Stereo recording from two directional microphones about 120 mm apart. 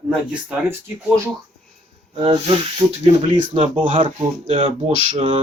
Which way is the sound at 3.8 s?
45° right (ahead or behind).